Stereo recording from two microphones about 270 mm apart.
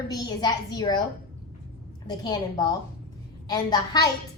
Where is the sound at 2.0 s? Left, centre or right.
Centre.